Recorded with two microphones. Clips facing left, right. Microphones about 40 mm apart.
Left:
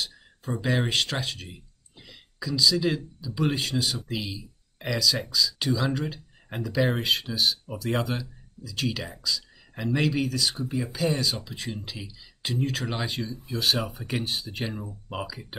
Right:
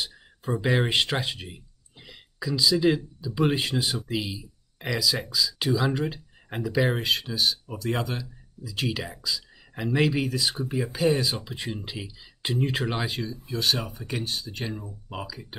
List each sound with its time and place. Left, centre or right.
0.0 s speech: centre
6.9 s speech: centre
8.6 s speech: centre
10.6 s speech: right
10.9 s speech: centre
12.9 s speech: centre
13.8 s speech: centre